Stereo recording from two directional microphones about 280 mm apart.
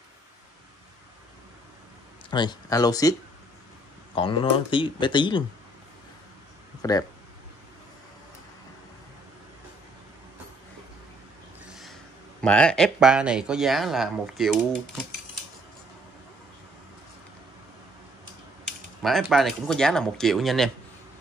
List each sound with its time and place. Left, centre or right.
2.3 s speech: centre
6.8 s speech: centre
11.6 s speech: centre
18.7 s speech: centre